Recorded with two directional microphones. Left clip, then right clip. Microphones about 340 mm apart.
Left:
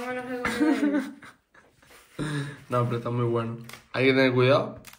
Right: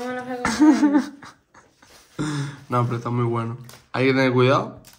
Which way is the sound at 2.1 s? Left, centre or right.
Centre.